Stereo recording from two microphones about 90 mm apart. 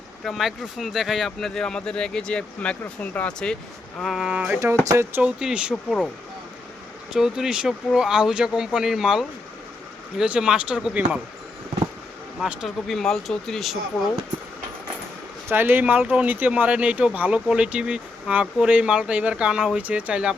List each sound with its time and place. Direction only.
0.3 s speech: centre (ahead or behind)
4.0 s speech: 5° right (ahead or behind)
4.9 s speech: 30° right (ahead or behind)
5.2 s speech: 10° right (ahead or behind)
7.1 s speech: 5° right (ahead or behind)
12.6 s speech: 5° left (ahead or behind)
15.4 s speech: 25° right (ahead or behind)